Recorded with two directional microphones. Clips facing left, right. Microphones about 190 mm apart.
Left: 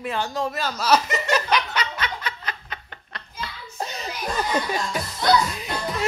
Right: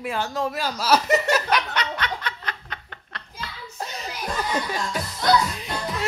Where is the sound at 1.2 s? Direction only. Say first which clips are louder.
Even; 5° right (ahead or behind).